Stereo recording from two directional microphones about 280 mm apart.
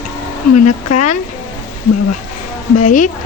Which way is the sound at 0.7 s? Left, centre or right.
Left.